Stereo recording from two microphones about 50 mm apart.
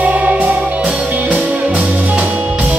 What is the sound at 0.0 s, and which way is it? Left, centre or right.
Music, right.